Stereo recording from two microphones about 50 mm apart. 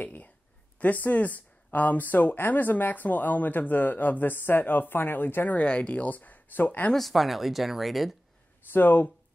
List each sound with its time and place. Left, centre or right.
0.0 s a sound: left
0.7 s speech: left
5.6 s speech: left
6.9 s speech: centre
8.7 s speech: left